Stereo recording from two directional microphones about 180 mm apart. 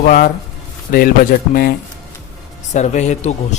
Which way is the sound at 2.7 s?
40° left (ahead or behind).